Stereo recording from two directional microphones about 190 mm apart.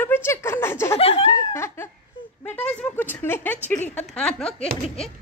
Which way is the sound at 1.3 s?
15° left (ahead or behind).